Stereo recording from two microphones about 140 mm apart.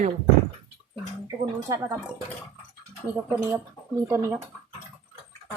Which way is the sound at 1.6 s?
25° right (ahead or behind).